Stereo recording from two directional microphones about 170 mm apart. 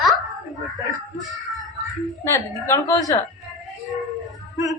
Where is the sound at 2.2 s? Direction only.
15° left (ahead or behind).